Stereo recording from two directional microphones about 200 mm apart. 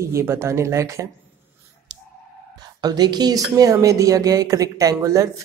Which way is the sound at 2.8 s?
20° right (ahead or behind).